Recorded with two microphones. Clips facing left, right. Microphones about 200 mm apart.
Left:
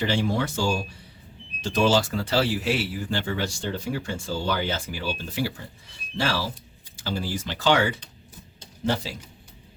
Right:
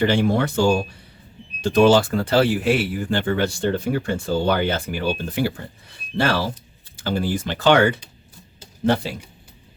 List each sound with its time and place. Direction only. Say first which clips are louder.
0.0 s speech: right 6 dB; 55° right (ahead or behind)